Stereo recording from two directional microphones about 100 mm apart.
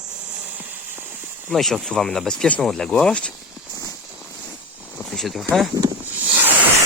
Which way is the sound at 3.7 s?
35° left (ahead or behind).